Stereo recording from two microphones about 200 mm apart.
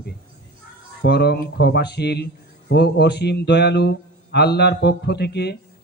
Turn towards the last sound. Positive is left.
turn(degrees=55)  # may be behind; listen again after turning